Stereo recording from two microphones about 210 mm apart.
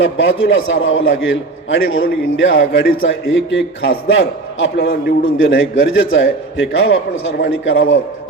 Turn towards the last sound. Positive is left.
turn(degrees=70)  # may be behind; listen again after turning